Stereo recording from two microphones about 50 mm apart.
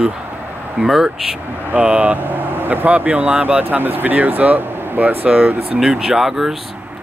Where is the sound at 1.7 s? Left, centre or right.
Right.